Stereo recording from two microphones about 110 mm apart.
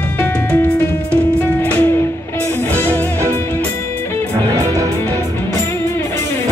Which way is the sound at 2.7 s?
25° right (ahead or behind).